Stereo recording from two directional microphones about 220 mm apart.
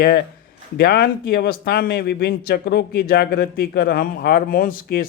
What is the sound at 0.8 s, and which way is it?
Speech, 45° left (ahead or behind).